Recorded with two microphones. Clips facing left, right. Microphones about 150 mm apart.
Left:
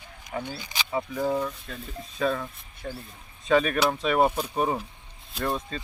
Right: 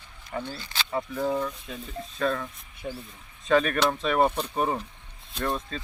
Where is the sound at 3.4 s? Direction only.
Centre (ahead or behind).